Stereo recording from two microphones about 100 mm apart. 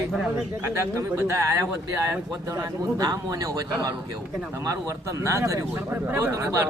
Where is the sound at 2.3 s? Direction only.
35° right (ahead or behind).